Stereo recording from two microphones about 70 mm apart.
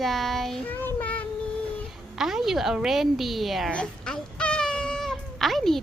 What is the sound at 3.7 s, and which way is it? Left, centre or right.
Speech, centre.